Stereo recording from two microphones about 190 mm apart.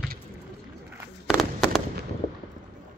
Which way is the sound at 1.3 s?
Centre (ahead or behind).